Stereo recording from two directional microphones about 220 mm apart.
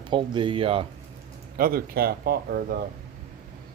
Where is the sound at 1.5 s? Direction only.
40° right (ahead or behind).